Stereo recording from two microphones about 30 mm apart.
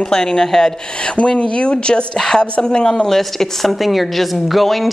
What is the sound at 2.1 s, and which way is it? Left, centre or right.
Speech, centre.